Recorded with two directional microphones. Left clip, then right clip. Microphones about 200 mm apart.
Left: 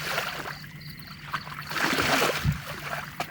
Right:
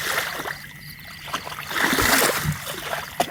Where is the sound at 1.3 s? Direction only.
50° right (ahead or behind).